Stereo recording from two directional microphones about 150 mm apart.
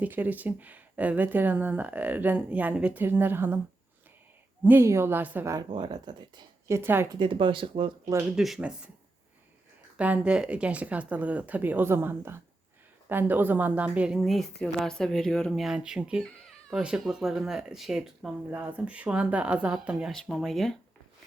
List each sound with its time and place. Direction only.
0.0 s speech: 10° right (ahead or behind)
4.6 s speech: 15° right (ahead or behind)
5.6 s speech: 30° right (ahead or behind)
6.7 s speech: 15° right (ahead or behind)
7.1 s speech: 35° right (ahead or behind)
8.4 s a woman's voice: centre (ahead or behind)
10.0 s a woman's voice: 10° right (ahead or behind)
16.2 s baby cry: 5° left (ahead or behind)
16.8 s a woman's voice: 5° right (ahead or behind)